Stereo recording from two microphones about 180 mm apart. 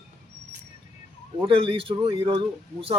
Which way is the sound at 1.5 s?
30° right (ahead or behind).